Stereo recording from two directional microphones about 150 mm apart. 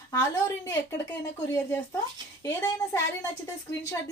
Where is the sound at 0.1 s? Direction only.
20° left (ahead or behind).